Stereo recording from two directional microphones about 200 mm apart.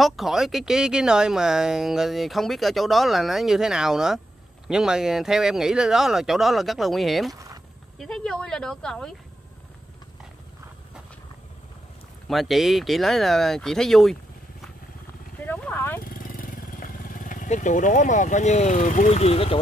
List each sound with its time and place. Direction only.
0.0 s speech: centre (ahead or behind)
7.3 s a sound: 15° right (ahead or behind)
8.0 s speech: centre (ahead or behind)
12.3 s speech: centre (ahead or behind)
15.4 s horse: 10° left (ahead or behind)
16.0 s vehicle: 45° left (ahead or behind)